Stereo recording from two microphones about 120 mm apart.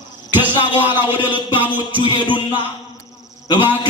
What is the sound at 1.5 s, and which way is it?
Music, 15° right (ahead or behind).